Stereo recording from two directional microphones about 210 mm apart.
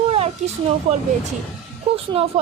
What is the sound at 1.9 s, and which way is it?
Speech, 25° right (ahead or behind).